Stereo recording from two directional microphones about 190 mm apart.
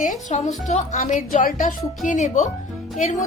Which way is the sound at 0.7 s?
35° left (ahead or behind).